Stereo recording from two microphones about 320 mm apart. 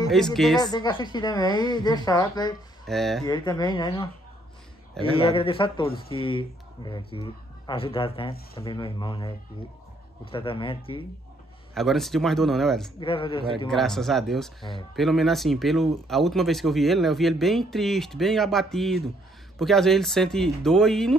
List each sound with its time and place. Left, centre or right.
0.1 s speech: centre
0.6 s speech: centre
2.9 s speech: centre
3.3 s speech: centre
5.1 s speech: centre
10.3 s speech: centre
11.7 s speech: centre
13.0 s speech: centre
13.7 s speech: centre